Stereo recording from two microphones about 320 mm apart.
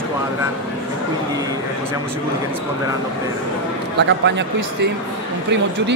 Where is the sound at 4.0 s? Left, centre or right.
Right.